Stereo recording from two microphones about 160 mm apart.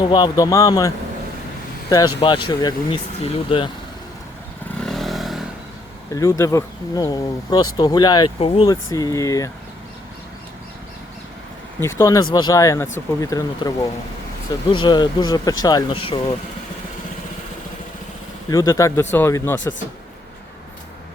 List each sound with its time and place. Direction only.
0.0 s speech: 25° left (ahead or behind)
2.2 s speech: 30° left (ahead or behind)
4.8 s vehicle: centre (ahead or behind)
6.1 s speech: 20° left (ahead or behind); by 8.7 s 35° left (ahead or behind)
8.7 s speech: 25° left (ahead or behind)
11.8 s speech: 15° left (ahead or behind); by 16.3 s 35° left (ahead or behind)
18.5 s speech: 20° left (ahead or behind)